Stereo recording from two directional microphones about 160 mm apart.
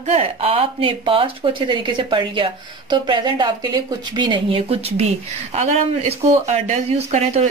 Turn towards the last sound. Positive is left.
turn(degrees=-45)  # may be behind; listen again after turning